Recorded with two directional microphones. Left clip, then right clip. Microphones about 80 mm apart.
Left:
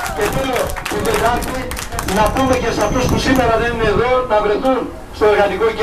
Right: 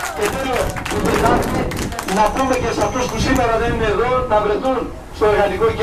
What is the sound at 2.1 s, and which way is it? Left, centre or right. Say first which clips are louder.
Speech: left 1 dB; left.